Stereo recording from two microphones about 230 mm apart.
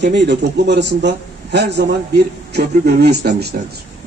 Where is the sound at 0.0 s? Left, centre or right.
Right.